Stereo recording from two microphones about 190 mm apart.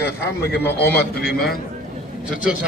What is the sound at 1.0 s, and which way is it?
Speech, 55° left (ahead or behind).